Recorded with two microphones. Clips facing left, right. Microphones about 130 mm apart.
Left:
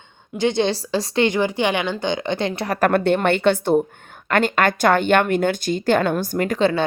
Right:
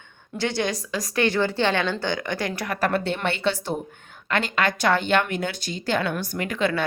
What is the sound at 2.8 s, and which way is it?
A woman's voice, 55° left (ahead or behind).